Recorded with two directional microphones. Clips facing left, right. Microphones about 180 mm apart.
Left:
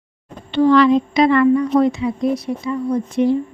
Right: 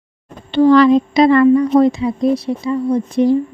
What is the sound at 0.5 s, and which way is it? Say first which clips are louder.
A woman's voice: right 3 dB; 35° right (ahead or behind).